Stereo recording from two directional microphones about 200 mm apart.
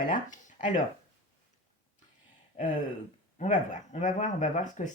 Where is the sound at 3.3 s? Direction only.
40° left (ahead or behind).